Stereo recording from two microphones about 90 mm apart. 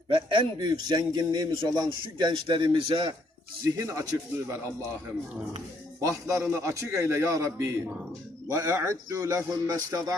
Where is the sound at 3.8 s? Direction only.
35° right (ahead or behind).